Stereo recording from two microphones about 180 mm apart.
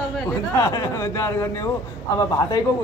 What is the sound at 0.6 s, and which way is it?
A man's voice, 20° left (ahead or behind).